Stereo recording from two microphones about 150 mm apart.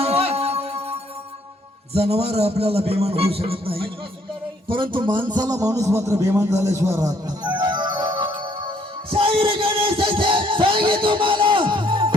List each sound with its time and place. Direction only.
0.0 s music: 40° right (ahead or behind)
1.9 s a man's voice: 40° right (ahead or behind)
5.3 s a sound: 25° right (ahead or behind)